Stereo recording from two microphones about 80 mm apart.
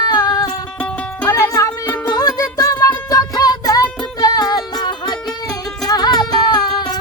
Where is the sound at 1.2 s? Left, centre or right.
Left.